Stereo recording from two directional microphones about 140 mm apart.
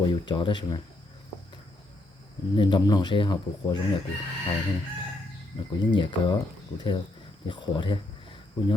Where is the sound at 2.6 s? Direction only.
30° left (ahead or behind).